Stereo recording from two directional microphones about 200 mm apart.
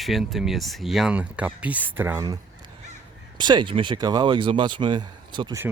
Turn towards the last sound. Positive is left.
turn(degrees=-20)  # may be behind; listen again after turning